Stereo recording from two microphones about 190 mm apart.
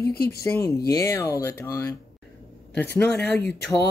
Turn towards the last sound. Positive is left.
turn(degrees=60)  # may be behind; listen again after turning